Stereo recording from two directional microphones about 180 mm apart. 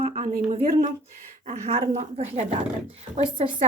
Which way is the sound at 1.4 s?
35° right (ahead or behind).